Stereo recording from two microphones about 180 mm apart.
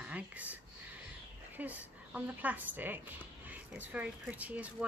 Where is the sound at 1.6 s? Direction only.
10° right (ahead or behind).